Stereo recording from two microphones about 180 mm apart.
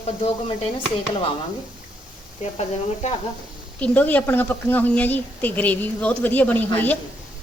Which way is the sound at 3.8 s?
10° left (ahead or behind).